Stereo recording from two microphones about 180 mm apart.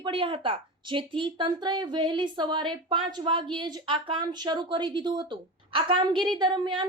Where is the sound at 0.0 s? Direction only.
30° right (ahead or behind).